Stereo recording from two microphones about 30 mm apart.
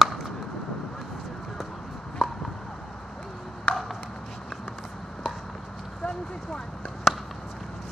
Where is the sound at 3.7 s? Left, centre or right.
Left.